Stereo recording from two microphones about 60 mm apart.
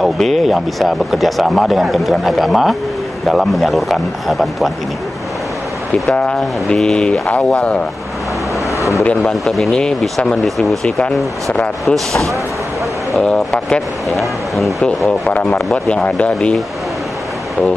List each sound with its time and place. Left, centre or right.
0.0 s speech: centre
6.1 s speech: centre
8.7 s vehicle: left
9.2 s speech: centre
9.7 s speech: centre
10.4 s speech: centre
10.9 s speech: centre
11.8 s speech: centre
14.1 s speech: centre
15.3 s speech: centre